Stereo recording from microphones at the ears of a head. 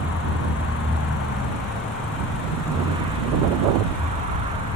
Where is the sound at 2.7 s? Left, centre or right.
Right.